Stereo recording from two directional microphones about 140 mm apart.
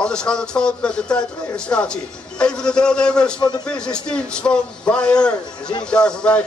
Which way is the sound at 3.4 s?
30° left (ahead or behind).